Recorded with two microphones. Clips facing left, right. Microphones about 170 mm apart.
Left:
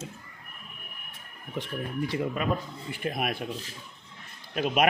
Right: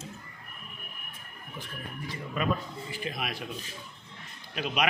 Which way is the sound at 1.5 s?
70° left (ahead or behind).